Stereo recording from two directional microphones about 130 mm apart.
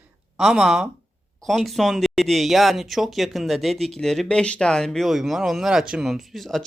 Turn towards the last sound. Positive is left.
turn(degrees=0)  # may be behind; listen again after turning